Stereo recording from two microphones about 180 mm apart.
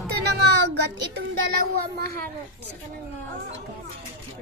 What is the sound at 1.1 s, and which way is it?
Speech, 60° right (ahead or behind).